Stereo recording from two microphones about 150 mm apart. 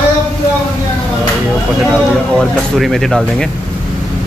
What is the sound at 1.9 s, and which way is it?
Speech, centre (ahead or behind).